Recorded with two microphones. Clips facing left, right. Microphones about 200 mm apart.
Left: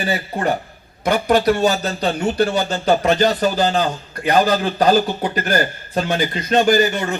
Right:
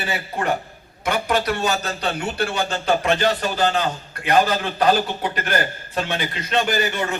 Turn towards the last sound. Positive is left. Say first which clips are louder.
# left 6 dB
turn(degrees=40)  # may be behind; listen again after turning